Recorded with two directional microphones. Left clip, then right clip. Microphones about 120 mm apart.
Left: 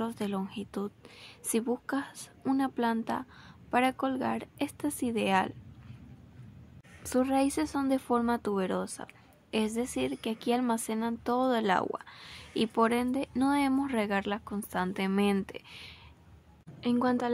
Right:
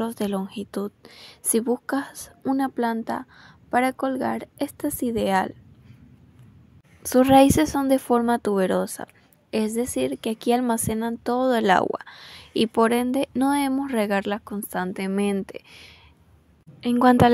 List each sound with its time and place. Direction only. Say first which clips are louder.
0.0 s a woman's voice: right 7 dB; 50° right (ahead or behind)
7.2 s a woman's voice: right 13 dB; 85° right
7.8 s a woman's voice: right 8 dB; 55° right (ahead or behind)
9.5 s a woman's voice: right 7 dB; 45° right (ahead or behind)
13.4 s a woman's voice: right 3 dB; 45° right (ahead or behind)
15.0 s a woman's voice: right 3 dB; 30° right (ahead or behind)
17.0 s a woman's voice: right 15 dB; 90° right